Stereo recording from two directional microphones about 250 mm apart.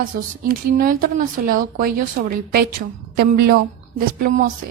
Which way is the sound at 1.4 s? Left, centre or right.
Right.